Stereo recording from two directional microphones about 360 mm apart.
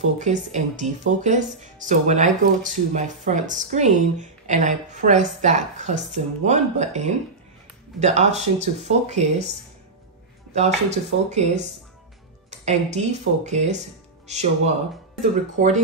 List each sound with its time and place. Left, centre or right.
0.2 s speech: centre
10.5 s speech: centre